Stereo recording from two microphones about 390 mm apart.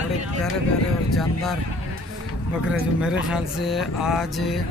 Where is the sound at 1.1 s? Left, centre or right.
Centre.